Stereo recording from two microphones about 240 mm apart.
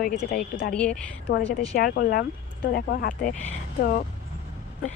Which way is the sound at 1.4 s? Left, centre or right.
Left.